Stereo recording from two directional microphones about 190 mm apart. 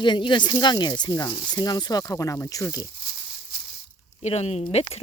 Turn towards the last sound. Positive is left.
turn(degrees=35)  # may be behind; listen again after turning